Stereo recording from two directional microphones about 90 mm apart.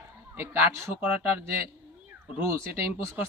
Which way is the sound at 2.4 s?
30° right (ahead or behind).